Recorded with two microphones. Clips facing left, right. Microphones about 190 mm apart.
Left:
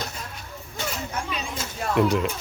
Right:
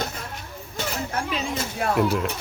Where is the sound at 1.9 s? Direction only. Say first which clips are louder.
Left 3 dB; 5° right (ahead or behind).